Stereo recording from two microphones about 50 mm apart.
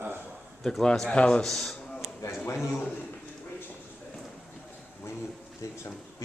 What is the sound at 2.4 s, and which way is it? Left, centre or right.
Speech, left.